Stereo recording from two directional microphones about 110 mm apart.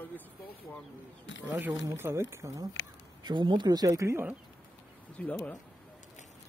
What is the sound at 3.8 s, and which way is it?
Speech, 25° right (ahead or behind).